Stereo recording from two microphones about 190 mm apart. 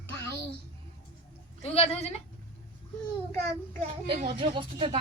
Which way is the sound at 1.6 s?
30° left (ahead or behind).